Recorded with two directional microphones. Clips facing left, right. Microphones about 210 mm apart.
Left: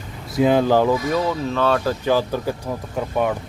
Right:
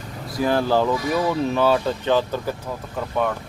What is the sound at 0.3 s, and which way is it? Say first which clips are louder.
Speech: left 4 dB; 20° left (ahead or behind).